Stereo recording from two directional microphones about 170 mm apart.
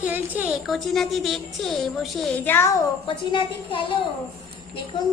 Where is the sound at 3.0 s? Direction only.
30° left (ahead or behind).